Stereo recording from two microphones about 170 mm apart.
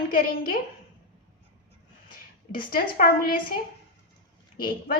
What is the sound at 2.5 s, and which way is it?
Speech, 60° left (ahead or behind).